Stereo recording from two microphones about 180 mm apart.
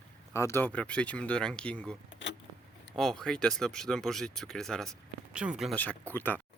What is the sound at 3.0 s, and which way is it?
Speech, centre (ahead or behind).